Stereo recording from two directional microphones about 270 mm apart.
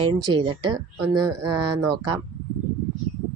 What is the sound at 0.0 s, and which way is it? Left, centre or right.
Speech, centre.